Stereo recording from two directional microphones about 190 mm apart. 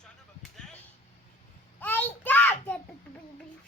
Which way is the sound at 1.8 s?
10° left (ahead or behind).